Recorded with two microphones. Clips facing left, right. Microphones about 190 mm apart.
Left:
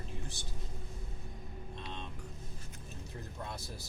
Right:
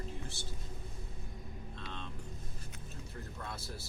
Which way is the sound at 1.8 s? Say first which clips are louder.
Left 1 dB; 15° left (ahead or behind).